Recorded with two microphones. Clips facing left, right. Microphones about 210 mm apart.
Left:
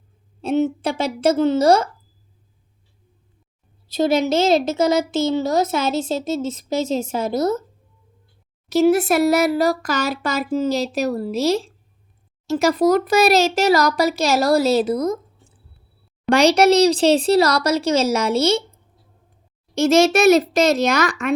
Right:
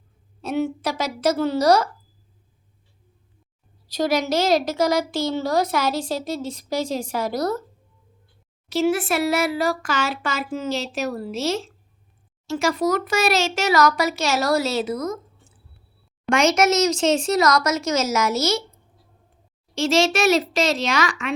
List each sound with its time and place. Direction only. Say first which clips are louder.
0.4 s a woman's voice: left 4 dB; 25° left (ahead or behind)
3.8 s a woman's voice: left 4 dB; 25° left (ahead or behind)
8.7 s speech: left 5 dB; 40° left (ahead or behind)
16.3 s speech: left 5 dB; 35° left (ahead or behind)
20.0 s a child's voice: left 5 dB; 55° left (ahead or behind)
20.7 s speech: left 5 dB; 40° left (ahead or behind)